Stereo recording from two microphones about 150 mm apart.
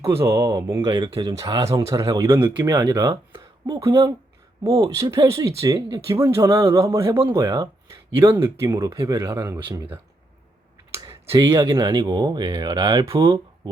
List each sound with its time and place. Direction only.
0.0 s speech: 20° right (ahead or behind)
10.9 s a sound: 20° right (ahead or behind)
11.9 s speech: 30° right (ahead or behind)